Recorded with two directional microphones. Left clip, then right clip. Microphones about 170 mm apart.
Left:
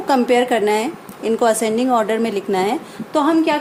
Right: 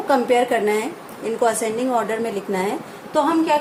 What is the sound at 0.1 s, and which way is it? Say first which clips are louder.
A woman's voice: left 2 dB; 65° left (ahead or behind).